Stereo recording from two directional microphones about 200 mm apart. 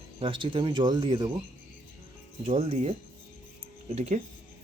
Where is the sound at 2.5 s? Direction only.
30° right (ahead or behind).